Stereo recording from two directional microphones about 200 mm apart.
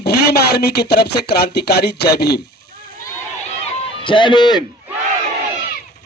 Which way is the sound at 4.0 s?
25° left (ahead or behind).